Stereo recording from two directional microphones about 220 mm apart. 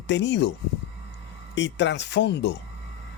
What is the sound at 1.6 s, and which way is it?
Speech, 55° left (ahead or behind).